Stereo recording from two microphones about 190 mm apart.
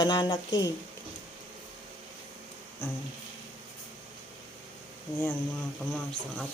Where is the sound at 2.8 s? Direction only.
10° left (ahead or behind).